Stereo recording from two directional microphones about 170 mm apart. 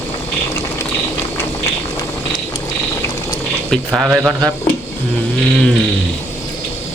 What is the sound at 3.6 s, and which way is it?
Speech, centre (ahead or behind).